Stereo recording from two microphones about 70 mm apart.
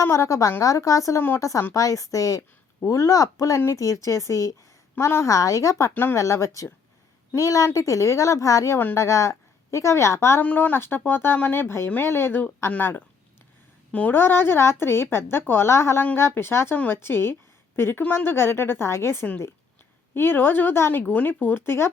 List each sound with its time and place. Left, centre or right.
0.0 s a woman's voice: left
5.9 s speech: left
6.1 s a woman's voice: left
10.4 s speech: left
10.8 s a woman's voice: left
12.0 s a woman's voice: left
14.1 s a woman's voice: left
20.9 s speech: centre; by 21.8 s left